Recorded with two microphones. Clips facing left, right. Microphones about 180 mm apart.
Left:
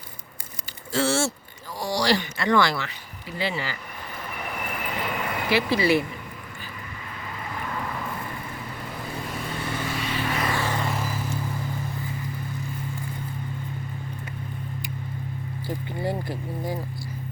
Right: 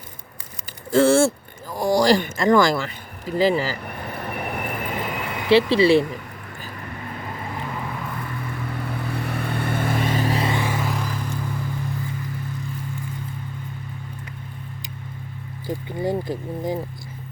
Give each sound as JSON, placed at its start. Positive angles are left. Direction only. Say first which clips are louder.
{"t": 0.9, "sound": "speech", "louder": "right 8 dB", "side_deg": -50}
{"t": 4.0, "sound": "train", "louder": "right 5 dB", "side_deg": -60}
{"t": 5.5, "sound": "speech", "louder": "right 7 dB", "side_deg": -30}
{"t": 9.2, "sound": "vehicle", "louder": "right 5 dB", "side_deg": -60}
{"t": 10.6, "sound": "vehicle", "louder": "right 2 dB", "side_deg": -5}
{"t": 15.6, "sound": "speech", "louder": "right 4 dB", "side_deg": -20}